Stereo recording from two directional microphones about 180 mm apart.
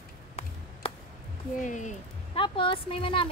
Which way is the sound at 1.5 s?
45° left (ahead or behind).